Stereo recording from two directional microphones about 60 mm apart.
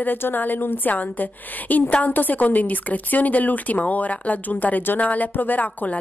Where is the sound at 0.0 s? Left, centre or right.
Left.